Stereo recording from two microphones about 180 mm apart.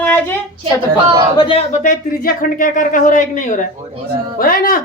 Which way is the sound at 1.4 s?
30° left (ahead or behind).